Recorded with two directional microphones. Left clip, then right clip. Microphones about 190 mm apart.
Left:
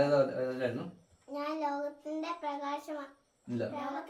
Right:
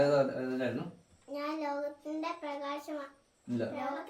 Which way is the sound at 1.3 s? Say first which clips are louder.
Left 1 dB; 10° right (ahead or behind).